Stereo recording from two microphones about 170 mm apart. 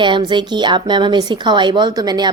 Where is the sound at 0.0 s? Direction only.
25° right (ahead or behind).